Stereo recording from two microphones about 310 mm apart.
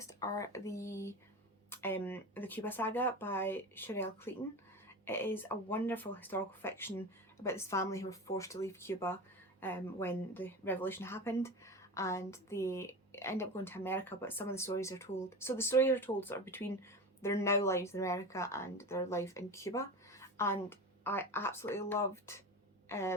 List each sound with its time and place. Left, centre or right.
0.0 s a woman's voice: centre